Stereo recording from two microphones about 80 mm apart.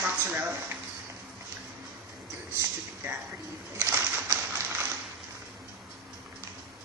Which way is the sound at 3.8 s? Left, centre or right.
Right.